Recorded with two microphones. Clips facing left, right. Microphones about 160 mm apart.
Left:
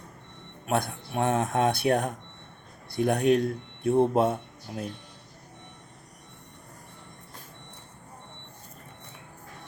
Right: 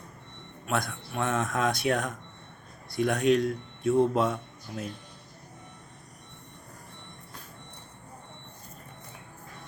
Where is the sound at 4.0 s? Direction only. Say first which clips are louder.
Left 2 dB; 55° left (ahead or behind).